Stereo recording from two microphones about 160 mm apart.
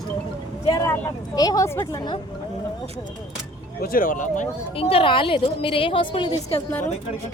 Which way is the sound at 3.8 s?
60° left (ahead or behind).